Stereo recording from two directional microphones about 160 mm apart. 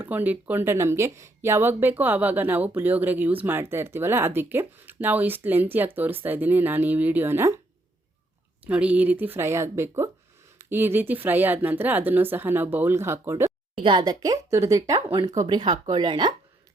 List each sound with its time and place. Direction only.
0.0 s speech: 10° right (ahead or behind)
8.6 s speech: 10° right (ahead or behind)
13.8 s speech: 25° right (ahead or behind)